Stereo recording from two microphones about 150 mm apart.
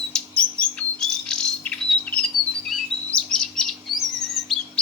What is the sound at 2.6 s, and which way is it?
Chirp, 5° left (ahead or behind).